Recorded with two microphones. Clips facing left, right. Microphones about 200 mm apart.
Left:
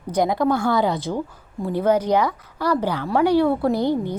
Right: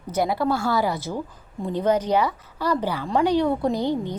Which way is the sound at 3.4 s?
15° right (ahead or behind).